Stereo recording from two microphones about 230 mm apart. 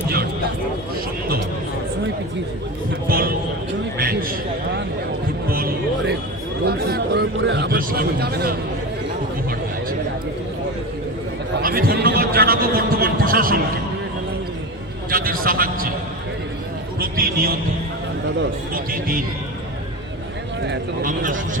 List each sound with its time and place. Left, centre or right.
3.1 s a man's voice: right
3.9 s a sound: right
5.5 s a man's voice: right
11.6 s a man's voice: right
15.1 s a sound: right
15.4 s a man's voice: right
17.0 s a man's voice: right
21.0 s a man's voice: right